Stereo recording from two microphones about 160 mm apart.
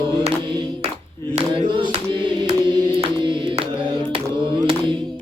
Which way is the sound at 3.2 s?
30° right (ahead or behind).